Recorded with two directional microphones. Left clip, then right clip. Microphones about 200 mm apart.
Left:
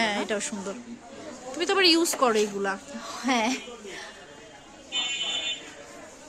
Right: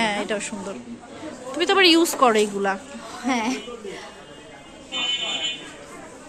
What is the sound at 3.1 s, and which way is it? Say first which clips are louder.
Speech: right 1 dB; 60° left (ahead or behind).